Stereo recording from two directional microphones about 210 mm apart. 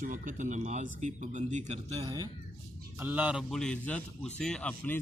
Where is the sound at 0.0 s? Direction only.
40° right (ahead or behind).